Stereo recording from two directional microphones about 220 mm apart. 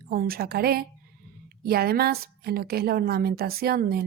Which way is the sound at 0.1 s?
40° right (ahead or behind).